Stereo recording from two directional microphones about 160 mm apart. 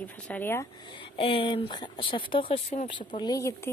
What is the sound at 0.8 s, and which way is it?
Speech, 30° left (ahead or behind).